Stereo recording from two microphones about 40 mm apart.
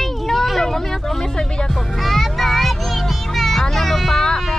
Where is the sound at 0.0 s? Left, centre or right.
Centre.